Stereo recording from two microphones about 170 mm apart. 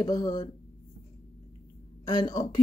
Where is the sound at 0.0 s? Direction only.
20° left (ahead or behind).